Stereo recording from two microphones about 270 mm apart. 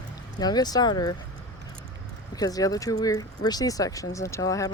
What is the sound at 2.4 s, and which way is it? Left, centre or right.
Speech, centre.